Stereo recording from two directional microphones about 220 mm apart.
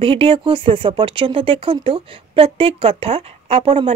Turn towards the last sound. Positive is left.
turn(degrees=-25)  # may be behind; listen again after turning